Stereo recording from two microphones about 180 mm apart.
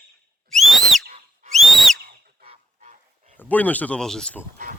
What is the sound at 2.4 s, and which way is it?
Goose, 35° right (ahead or behind).